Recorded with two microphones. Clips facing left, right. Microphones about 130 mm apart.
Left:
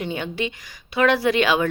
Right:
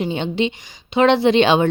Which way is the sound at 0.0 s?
20° right (ahead or behind).